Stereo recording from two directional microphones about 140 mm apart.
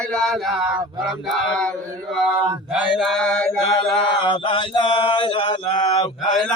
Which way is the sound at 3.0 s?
5° left (ahead or behind).